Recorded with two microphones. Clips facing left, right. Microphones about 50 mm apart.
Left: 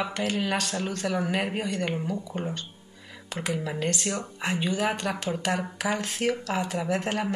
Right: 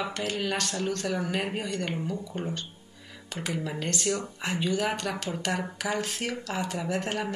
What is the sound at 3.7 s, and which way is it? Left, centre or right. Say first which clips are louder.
Speech: left 3 dB; centre.